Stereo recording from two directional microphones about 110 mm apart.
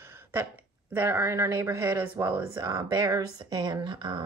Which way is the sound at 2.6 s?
35° right (ahead or behind).